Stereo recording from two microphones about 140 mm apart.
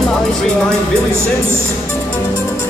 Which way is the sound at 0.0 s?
5° left (ahead or behind).